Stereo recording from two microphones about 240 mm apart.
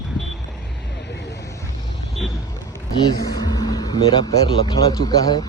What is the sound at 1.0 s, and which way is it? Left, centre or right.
Vehicle, left.